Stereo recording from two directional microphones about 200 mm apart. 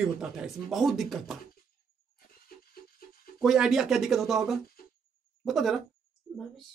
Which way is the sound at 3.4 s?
Centre (ahead or behind).